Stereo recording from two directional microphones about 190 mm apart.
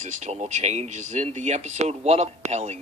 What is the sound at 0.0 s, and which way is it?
Speech, 40° right (ahead or behind).